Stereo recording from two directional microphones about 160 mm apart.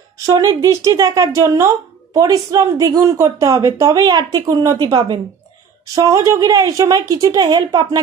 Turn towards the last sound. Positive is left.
turn(degrees=-25)  # may be behind; listen again after turning